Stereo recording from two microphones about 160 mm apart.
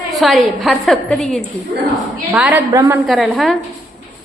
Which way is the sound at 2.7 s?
20° right (ahead or behind).